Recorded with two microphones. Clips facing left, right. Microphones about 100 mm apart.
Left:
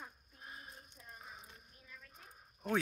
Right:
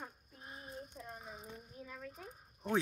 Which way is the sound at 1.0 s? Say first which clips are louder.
Right 9 dB; 90° right.